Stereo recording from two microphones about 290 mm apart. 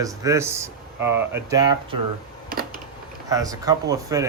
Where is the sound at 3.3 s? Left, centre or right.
Centre.